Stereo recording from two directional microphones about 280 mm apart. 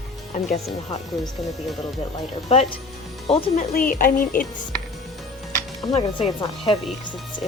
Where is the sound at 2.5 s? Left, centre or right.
Left.